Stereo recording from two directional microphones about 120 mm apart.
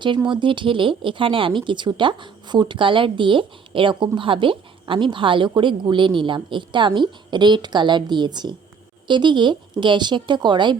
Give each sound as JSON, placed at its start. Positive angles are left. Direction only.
{"t": 0.3, "sound": "a woman's voice", "side_deg": -40}